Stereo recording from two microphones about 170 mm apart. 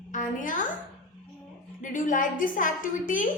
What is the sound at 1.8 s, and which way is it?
A woman's voice, 50° left (ahead or behind).